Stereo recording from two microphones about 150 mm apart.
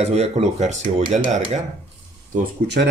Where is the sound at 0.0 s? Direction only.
45° right (ahead or behind).